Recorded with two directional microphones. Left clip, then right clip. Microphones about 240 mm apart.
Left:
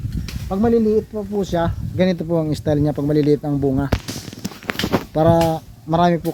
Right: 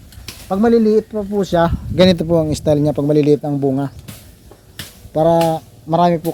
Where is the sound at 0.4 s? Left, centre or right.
Right.